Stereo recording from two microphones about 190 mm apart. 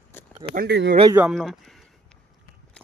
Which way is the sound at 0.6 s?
65° right (ahead or behind).